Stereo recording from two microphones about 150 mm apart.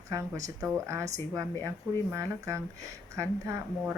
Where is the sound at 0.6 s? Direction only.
20° right (ahead or behind).